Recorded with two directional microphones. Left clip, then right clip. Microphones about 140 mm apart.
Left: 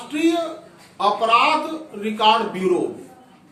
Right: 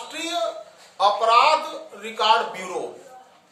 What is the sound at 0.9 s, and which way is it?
A man's voice, 30° right (ahead or behind).